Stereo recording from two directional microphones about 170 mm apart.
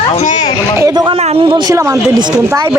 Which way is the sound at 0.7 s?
20° right (ahead or behind).